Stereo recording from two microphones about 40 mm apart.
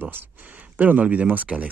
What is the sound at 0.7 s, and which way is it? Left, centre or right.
Speech, right.